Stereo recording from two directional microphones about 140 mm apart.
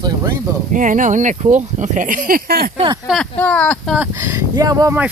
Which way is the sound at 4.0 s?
15° right (ahead or behind).